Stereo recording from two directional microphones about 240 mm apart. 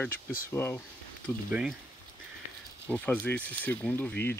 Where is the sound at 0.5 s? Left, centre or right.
Centre.